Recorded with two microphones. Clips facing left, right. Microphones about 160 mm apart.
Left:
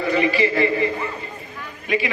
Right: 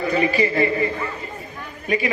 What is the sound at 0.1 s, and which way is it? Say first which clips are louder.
Speech: left 1 dB; 40° right (ahead or behind).